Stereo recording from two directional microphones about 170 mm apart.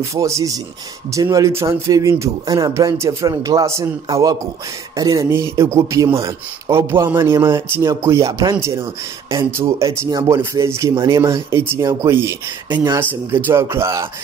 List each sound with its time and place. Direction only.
0.0 s speech: 15° right (ahead or behind)